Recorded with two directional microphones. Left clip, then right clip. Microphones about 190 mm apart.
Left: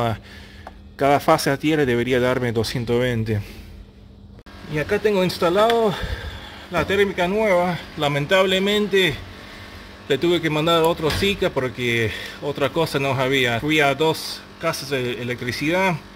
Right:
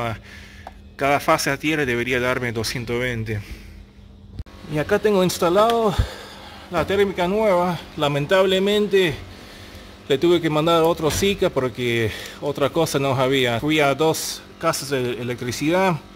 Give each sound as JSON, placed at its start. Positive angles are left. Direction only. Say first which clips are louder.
{"t": 0.9, "sound": "speech", "louder": "left 2 dB", "side_deg": 20}
{"t": 4.7, "sound": "speech", "louder": "right 1 dB", "side_deg": -15}